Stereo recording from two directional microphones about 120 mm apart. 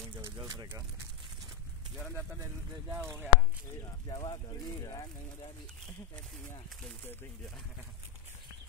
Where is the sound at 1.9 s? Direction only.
5° left (ahead or behind).